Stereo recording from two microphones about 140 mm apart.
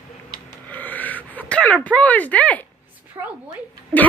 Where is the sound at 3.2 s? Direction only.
20° right (ahead or behind).